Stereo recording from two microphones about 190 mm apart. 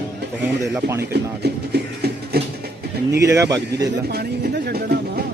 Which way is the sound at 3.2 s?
15° right (ahead or behind).